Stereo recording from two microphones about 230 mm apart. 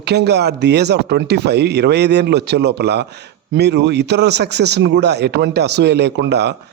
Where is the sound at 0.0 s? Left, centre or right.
Right.